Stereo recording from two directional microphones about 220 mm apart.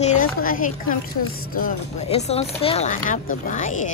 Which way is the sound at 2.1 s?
30° left (ahead or behind).